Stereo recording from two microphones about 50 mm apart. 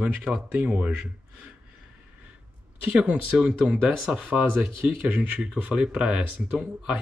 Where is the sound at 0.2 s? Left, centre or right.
Centre.